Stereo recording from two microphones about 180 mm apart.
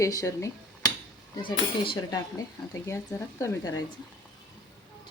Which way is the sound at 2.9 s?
15° left (ahead or behind).